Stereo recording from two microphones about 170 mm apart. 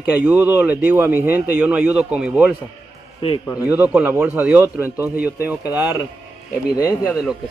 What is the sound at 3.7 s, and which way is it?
Speech, 10° right (ahead or behind).